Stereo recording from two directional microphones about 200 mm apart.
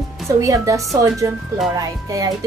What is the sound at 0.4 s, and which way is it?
A woman's voice, 15° right (ahead or behind).